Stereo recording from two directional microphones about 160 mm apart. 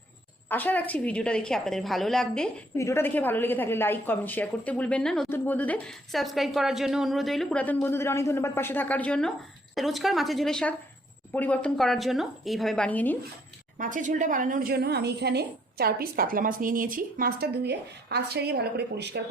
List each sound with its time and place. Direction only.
0.4 s a woman's voice: 10° left (ahead or behind)
2.7 s a woman's voice: 15° left (ahead or behind)
13.7 s a woman's voice: 55° right (ahead or behind); by 19.2 s 90° right